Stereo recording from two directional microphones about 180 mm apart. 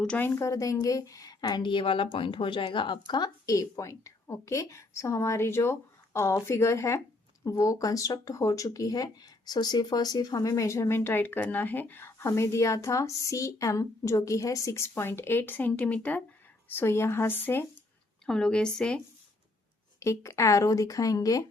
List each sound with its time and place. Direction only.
0.0 s a woman's voice: 10° left (ahead or behind)
20.0 s speech: 15° left (ahead or behind)